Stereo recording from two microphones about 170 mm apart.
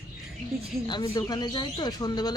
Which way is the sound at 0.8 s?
25° left (ahead or behind).